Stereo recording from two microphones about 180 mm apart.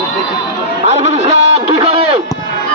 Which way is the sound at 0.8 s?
35° right (ahead or behind).